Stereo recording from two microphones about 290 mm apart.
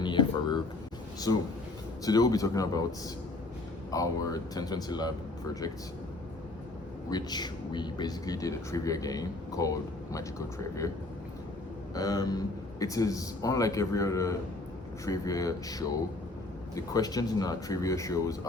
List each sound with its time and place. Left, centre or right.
0.0 s a sound: centre
1.3 s speech: centre
3.9 s speech: centre
7.1 s speech: centre
11.9 s speech: centre